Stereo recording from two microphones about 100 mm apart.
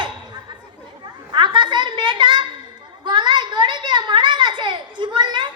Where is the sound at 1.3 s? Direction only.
55° right (ahead or behind).